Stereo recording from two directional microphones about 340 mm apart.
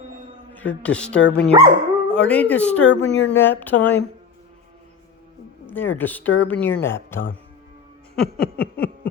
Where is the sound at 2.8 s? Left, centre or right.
Left.